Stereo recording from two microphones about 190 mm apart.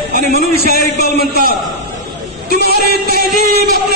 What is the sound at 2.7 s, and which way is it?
Music, 55° right (ahead or behind).